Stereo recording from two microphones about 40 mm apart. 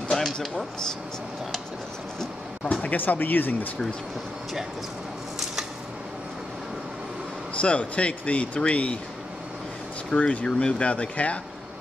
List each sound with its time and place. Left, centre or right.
0.1 s speech: centre
2.1 s a sound: left
2.8 s speech: left
7.5 s speech: left
10.4 s speech: left